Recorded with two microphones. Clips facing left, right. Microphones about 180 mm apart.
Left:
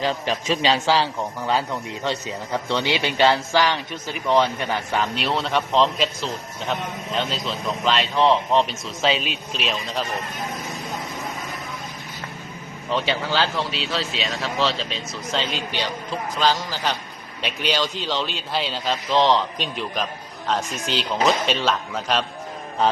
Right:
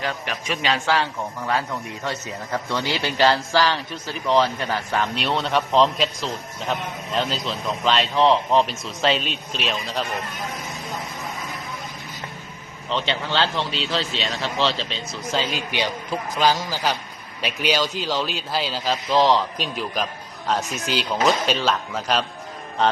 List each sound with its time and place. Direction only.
0.0 s a man's voice: 25° left (ahead or behind)
4.9 s a man's voice: centre (ahead or behind)
12.9 s a man's voice: 5° left (ahead or behind)